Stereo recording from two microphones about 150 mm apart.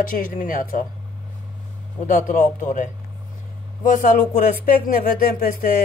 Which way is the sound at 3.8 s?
60° left (ahead or behind).